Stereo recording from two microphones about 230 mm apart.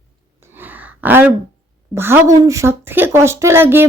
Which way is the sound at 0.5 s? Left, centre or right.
Centre.